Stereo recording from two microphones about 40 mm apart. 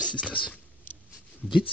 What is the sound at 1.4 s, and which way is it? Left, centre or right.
Speech, centre.